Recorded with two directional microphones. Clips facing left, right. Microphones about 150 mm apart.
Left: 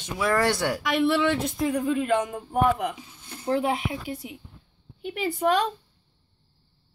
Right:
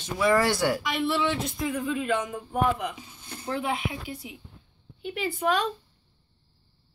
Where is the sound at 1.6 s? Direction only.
40° left (ahead or behind).